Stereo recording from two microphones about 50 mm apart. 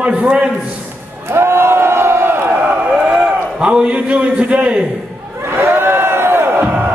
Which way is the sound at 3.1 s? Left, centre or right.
Centre.